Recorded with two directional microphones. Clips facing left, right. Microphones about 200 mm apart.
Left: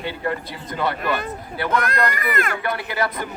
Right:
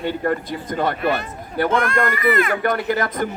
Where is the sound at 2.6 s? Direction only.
45° right (ahead or behind).